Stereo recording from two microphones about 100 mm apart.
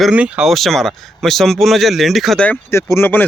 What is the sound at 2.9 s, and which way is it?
Speech, 20° left (ahead or behind).